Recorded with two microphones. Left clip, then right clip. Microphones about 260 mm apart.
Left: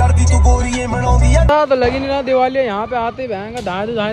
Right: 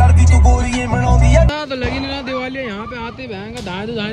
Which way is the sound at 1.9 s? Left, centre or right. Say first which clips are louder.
Left 5 dB; left.